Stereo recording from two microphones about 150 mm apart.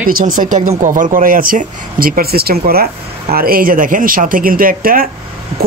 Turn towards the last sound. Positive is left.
turn(degrees=-75)  # may be behind; listen again after turning